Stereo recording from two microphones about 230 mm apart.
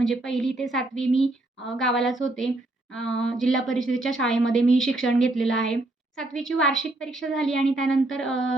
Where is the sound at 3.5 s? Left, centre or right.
Left.